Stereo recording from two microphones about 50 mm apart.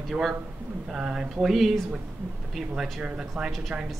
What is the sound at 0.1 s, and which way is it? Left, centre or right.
Speech, centre.